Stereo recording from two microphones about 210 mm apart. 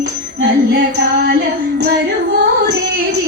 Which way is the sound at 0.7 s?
55° right (ahead or behind).